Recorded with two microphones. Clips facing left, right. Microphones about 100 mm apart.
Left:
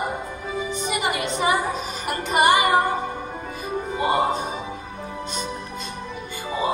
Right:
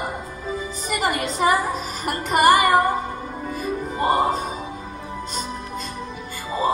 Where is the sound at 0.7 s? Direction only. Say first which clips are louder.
Right 1 dB; 45° right (ahead or behind).